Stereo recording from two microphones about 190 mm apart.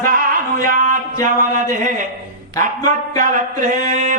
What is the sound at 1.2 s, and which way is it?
Mantra, 45° right (ahead or behind).